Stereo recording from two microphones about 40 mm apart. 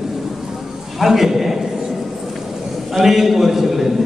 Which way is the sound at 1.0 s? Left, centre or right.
Centre.